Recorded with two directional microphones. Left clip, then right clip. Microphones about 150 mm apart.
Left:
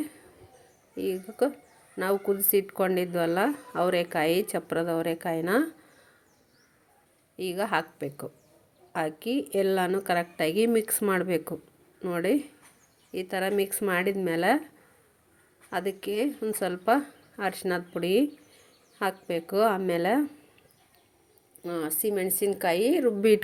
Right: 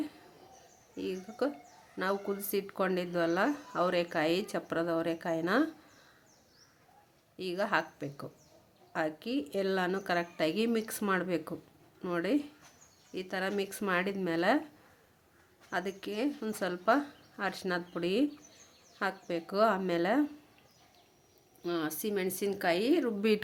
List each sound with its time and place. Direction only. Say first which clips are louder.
0.9 s speech: left 7 dB; 25° left (ahead or behind)
7.3 s speech: left 3 dB; 25° left (ahead or behind)
15.7 s speech: left 6 dB; 20° left (ahead or behind)
21.6 s a woman's voice: left 4 dB; 10° left (ahead or behind)